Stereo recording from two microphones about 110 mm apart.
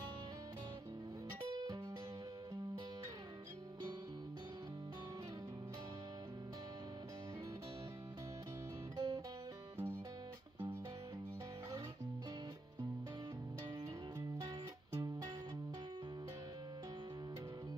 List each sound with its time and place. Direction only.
8.9 s music: 35° right (ahead or behind)
14.4 s music: 30° right (ahead or behind)